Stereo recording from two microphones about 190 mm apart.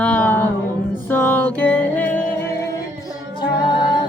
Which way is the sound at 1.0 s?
10° left (ahead or behind).